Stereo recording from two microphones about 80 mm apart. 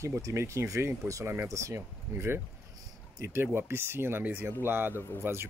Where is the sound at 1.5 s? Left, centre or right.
Right.